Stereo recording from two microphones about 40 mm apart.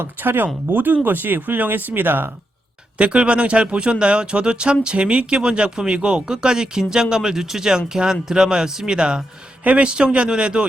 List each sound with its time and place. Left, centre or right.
0.0 s speech: right
3.0 s a man's voice: right